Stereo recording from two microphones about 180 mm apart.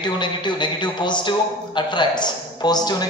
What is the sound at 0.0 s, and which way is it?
A man's voice, 25° left (ahead or behind).